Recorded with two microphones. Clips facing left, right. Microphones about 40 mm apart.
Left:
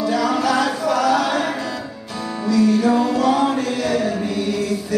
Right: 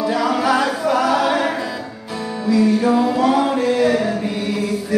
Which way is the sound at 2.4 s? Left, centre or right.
Centre.